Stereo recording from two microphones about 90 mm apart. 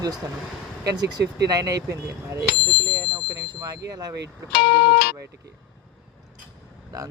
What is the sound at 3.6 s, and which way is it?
Speech, 40° right (ahead or behind).